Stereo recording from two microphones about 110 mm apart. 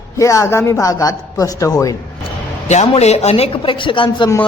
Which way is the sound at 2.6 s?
80° left.